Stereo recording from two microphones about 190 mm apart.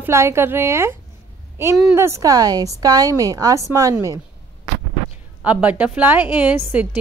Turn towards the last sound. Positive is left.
turn(degrees=-10)  # may be behind; listen again after turning